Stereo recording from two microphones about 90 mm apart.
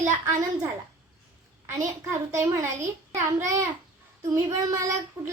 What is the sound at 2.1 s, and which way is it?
Speech, 35° right (ahead or behind).